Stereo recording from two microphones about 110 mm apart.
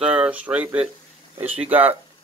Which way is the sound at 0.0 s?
10° right (ahead or behind).